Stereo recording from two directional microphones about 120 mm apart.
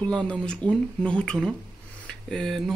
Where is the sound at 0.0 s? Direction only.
10° left (ahead or behind).